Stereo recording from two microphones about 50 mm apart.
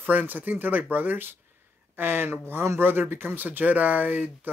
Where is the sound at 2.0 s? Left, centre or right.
Right.